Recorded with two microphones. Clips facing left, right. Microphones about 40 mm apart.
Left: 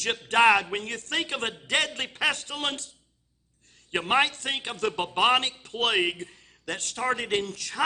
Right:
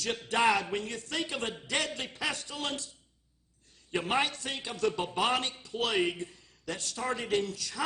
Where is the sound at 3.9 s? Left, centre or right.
Left.